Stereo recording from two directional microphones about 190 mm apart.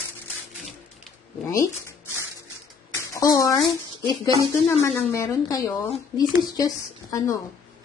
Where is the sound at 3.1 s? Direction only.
15° left (ahead or behind).